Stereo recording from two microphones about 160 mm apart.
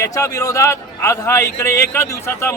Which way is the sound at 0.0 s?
20° left (ahead or behind).